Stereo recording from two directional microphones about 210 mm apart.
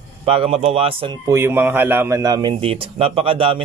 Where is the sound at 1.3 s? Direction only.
10° right (ahead or behind).